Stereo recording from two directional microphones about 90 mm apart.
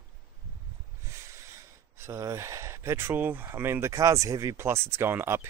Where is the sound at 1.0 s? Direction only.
30° right (ahead or behind).